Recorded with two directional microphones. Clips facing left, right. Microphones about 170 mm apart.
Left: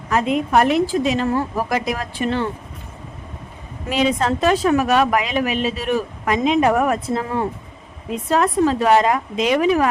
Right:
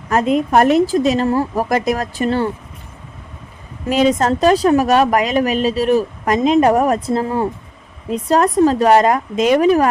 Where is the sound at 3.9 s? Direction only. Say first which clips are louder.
Right 4 dB; 40° right (ahead or behind).